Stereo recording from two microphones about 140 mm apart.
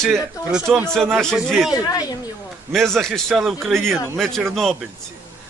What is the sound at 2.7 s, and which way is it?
Speech, centre (ahead or behind).